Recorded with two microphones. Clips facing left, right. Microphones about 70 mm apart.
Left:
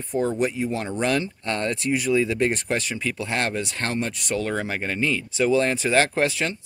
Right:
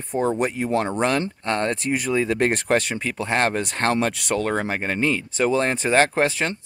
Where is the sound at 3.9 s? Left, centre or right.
Right.